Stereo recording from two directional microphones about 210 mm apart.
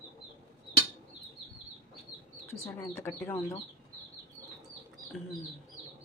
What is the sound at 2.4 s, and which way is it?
Speech, 10° left (ahead or behind).